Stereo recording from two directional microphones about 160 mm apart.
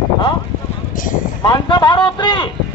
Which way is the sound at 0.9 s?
55° left (ahead or behind).